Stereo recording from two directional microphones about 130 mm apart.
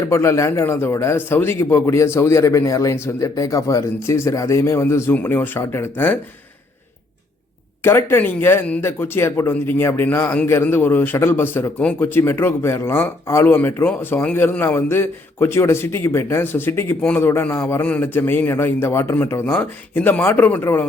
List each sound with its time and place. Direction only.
0.1 s a man's voice: 20° left (ahead or behind)
7.9 s speech: 20° left (ahead or behind)